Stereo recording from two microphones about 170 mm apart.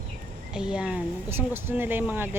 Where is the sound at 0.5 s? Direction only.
5° right (ahead or behind).